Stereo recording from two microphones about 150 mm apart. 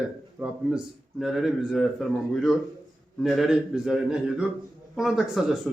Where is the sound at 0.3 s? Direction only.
5° right (ahead or behind).